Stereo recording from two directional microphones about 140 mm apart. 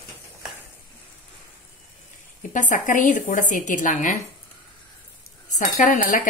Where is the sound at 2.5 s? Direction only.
65° left (ahead or behind).